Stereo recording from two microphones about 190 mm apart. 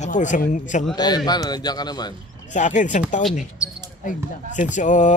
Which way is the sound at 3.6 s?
5° right (ahead or behind).